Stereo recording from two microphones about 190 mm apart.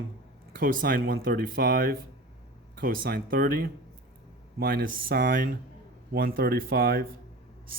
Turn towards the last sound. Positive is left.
turn(degrees=-50)  # may be behind; listen again after turning